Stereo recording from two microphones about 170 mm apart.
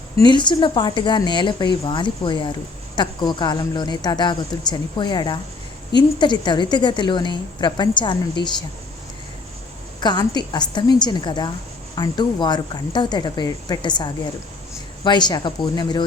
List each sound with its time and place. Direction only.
0.2 s a woman's voice: 25° left (ahead or behind)
10.0 s a woman's voice: 25° left (ahead or behind)